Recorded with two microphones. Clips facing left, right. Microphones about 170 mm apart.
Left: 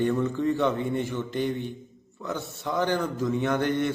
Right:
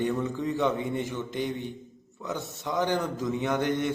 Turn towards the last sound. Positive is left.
turn(degrees=-15)  # may be behind; listen again after turning